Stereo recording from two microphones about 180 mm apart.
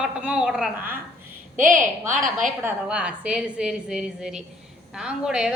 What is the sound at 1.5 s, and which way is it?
Speech, 45° right (ahead or behind).